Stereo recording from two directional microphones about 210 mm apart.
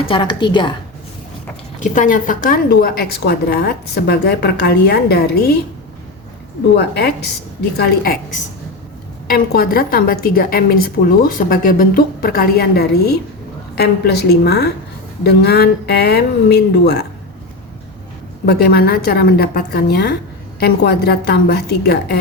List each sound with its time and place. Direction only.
0.0 s a woman's voice: 25° left (ahead or behind)
1.8 s a woman's voice: 40° left (ahead or behind)
6.7 s a woman's voice: 50° left (ahead or behind)
18.4 s a woman's voice: 50° left (ahead or behind)